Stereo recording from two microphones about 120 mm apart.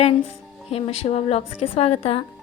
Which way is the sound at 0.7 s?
60° left (ahead or behind).